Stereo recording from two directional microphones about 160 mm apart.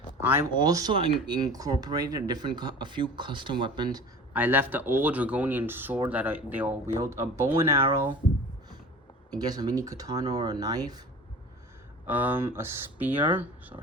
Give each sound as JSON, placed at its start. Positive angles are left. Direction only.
{"t": 0.2, "sound": "speech", "side_deg": -15}
{"t": 4.4, "sound": "speech", "side_deg": -10}
{"t": 9.3, "sound": "speech", "side_deg": -25}
{"t": 12.0, "sound": "speech", "side_deg": -10}